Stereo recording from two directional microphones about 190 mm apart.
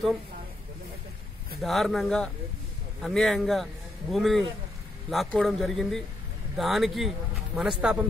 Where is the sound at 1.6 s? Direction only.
Centre (ahead or behind).